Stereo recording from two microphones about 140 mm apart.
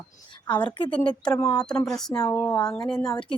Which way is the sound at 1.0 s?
5° left (ahead or behind).